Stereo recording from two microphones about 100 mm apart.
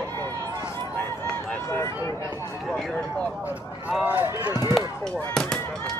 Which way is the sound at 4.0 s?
20° right (ahead or behind).